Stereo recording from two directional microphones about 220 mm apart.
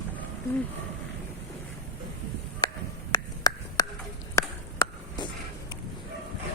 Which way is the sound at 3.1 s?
15° left (ahead or behind).